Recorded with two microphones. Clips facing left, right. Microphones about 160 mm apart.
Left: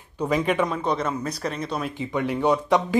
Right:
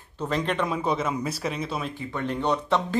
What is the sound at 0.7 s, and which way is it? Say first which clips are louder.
Speech: left 1 dB; 5° right (ahead or behind).